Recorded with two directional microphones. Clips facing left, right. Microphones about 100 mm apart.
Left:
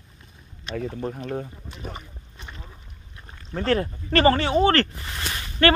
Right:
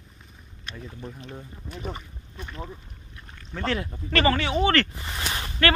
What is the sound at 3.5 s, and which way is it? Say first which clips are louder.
Speech: left 5 dB; 40° left (ahead or behind).